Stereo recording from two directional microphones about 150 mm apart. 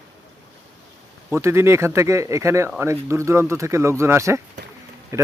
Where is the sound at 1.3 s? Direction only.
15° right (ahead or behind).